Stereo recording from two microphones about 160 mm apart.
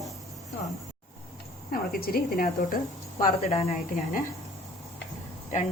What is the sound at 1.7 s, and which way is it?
Speech, 70° left (ahead or behind).